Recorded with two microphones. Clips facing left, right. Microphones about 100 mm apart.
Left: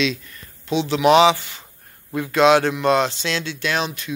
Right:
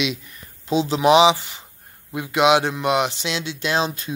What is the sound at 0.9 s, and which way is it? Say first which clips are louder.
Speech: left 1 dB; 20° right (ahead or behind).